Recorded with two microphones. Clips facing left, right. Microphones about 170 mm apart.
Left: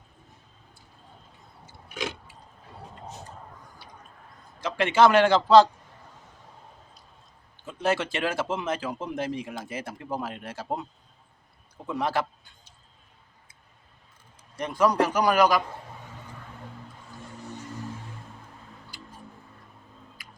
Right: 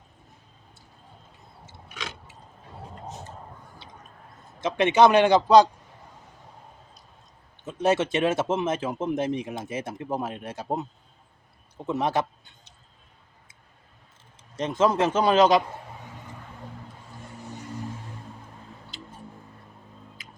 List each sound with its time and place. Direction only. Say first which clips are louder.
4.6 s a man's voice: right 2 dB; 20° right (ahead or behind)
7.6 s speech: right 4 dB; 20° right (ahead or behind)
11.9 s speech: right 2 dB; 20° right (ahead or behind)
14.5 s speech: right 1 dB; 20° right (ahead or behind)
18.9 s a sound: right 4 dB; 20° right (ahead or behind)
20.2 s tick-tock: right 2 dB; 20° right (ahead or behind)